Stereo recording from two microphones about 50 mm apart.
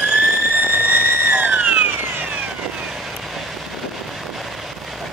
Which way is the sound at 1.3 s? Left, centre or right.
Right.